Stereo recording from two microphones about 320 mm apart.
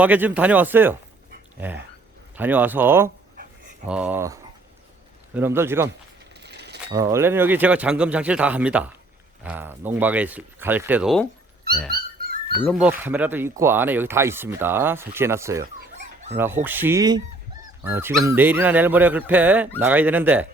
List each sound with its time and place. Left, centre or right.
0.0 s speech: centre
6.4 s mechanisms: right
6.9 s speech: centre
11.9 s dog: right
12.6 s speech: centre